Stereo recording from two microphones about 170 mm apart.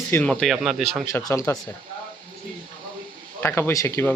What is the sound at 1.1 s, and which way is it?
Speech, 15° left (ahead or behind).